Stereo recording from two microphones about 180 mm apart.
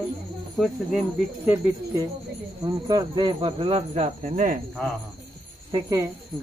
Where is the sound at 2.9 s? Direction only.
25° right (ahead or behind); by 4.6 s 45° right (ahead or behind).